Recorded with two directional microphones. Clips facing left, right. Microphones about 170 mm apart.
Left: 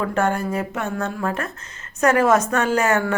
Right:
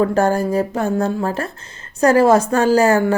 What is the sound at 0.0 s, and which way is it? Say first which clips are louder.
A woman's voice: right 6 dB; 35° right (ahead or behind).